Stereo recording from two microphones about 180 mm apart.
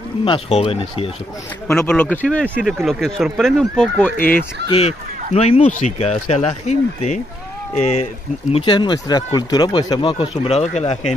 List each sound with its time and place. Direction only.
0.2 s speech: 30° left (ahead or behind)
1.7 s speech: 10° left (ahead or behind)
4.6 s speech: 35° left (ahead or behind)
8.5 s speech: 30° left (ahead or behind)